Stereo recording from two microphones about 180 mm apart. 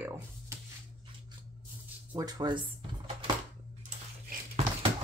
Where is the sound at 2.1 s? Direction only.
20° right (ahead or behind).